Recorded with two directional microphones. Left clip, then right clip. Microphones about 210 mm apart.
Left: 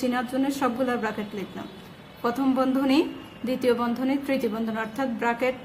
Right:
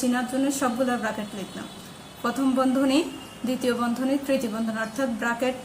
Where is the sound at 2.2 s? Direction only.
35° left (ahead or behind).